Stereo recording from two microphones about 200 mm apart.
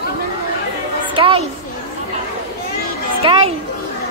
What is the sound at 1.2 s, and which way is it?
Speech, 30° right (ahead or behind).